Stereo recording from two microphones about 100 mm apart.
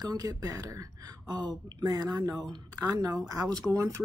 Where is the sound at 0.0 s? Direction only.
40° right (ahead or behind).